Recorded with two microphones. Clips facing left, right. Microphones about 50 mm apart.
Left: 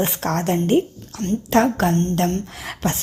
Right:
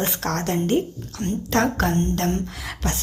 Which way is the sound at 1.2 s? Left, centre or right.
Right.